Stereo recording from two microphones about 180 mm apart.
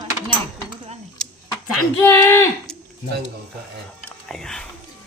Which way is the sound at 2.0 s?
10° left (ahead or behind).